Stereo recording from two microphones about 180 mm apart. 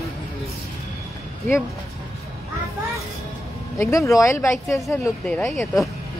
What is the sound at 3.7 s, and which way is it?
Speech, 15° left (ahead or behind).